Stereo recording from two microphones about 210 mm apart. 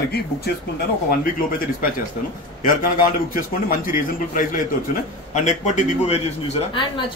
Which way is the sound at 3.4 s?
40° left (ahead or behind).